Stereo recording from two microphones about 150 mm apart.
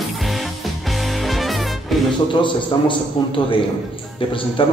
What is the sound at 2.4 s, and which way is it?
A man's voice, 35° left (ahead or behind).